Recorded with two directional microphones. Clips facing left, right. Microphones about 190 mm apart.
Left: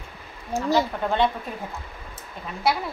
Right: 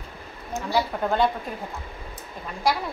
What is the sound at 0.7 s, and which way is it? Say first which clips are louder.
Speech: right 1 dB; centre (ahead or behind).